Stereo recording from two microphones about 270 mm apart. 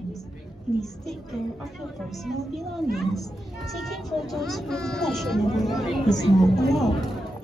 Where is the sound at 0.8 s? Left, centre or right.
Centre.